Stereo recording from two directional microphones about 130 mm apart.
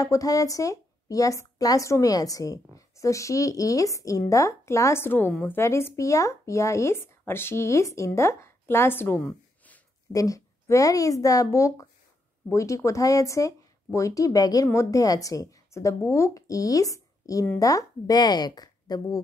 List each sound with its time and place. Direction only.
0.0 s a woman's voice: 25° left (ahead or behind)